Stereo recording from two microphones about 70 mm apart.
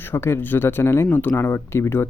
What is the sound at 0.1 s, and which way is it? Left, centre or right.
Speech, left.